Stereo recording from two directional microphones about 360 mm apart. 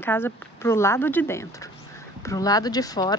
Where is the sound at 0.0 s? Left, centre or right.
Centre.